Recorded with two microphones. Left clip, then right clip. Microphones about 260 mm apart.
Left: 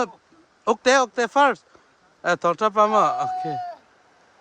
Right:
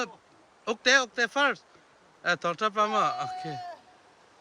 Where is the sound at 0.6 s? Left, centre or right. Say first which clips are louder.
Left 6 dB; left.